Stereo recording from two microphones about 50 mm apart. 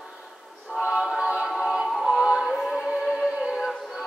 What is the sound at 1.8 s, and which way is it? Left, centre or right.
Music, centre.